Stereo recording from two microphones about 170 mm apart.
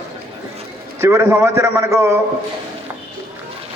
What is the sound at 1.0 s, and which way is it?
A man's voice, 15° right (ahead or behind).